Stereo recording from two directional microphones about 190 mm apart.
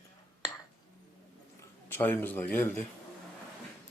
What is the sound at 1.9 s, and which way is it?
Speech, 10° left (ahead or behind).